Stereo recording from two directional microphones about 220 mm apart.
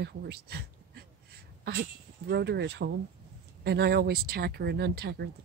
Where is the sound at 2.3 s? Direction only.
50° right (ahead or behind).